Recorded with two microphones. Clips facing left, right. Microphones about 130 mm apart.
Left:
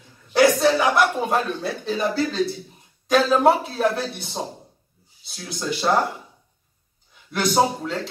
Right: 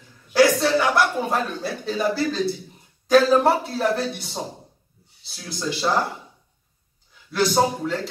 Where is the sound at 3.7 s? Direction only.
Centre (ahead or behind).